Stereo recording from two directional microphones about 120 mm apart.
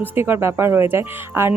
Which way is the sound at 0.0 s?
15° right (ahead or behind).